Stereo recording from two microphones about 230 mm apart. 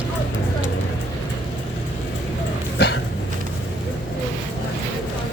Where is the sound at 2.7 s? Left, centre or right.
Left.